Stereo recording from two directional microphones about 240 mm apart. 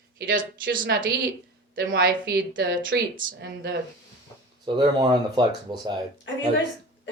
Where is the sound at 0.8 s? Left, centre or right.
Right.